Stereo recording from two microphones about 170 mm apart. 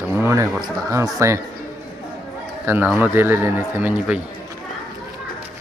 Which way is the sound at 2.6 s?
10° right (ahead or behind).